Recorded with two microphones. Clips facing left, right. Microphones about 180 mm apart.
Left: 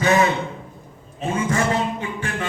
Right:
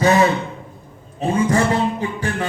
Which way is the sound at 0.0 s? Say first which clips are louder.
Right 3 dB; 35° right (ahead or behind).